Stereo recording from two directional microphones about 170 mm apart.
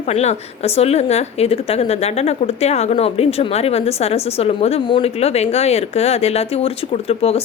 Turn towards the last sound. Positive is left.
turn(degrees=35)  # may be behind; listen again after turning